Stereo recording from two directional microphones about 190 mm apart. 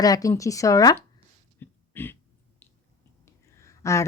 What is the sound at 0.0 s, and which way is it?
Speech, 20° left (ahead or behind).